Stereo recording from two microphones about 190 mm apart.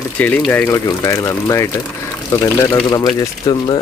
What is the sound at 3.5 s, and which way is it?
Speech, 20° left (ahead or behind).